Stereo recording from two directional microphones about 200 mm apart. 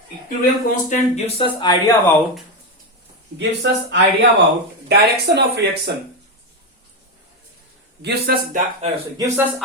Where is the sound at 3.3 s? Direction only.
60° right (ahead or behind).